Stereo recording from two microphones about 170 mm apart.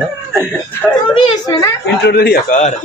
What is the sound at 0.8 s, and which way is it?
Speech, 5° left (ahead or behind).